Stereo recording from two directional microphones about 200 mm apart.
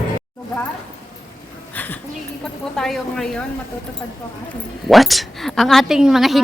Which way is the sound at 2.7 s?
Centre (ahead or behind).